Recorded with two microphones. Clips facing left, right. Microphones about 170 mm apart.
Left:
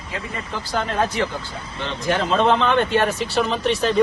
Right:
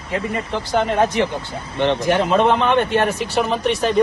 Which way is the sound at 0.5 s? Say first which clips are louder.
Right 4 dB; 20° right (ahead or behind).